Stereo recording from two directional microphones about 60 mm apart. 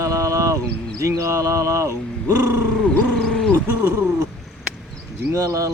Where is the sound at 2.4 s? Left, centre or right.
Right.